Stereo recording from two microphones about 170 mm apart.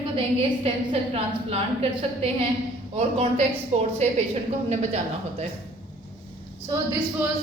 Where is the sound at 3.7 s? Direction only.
40° right (ahead or behind).